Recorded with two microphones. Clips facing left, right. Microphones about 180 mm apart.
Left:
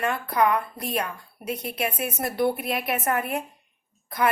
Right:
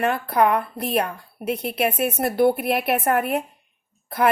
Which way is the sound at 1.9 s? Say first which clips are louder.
Right 7 dB; 65° right (ahead or behind).